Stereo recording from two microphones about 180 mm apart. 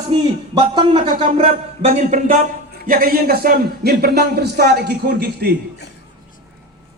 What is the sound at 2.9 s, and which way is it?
Speech, 55° right (ahead or behind).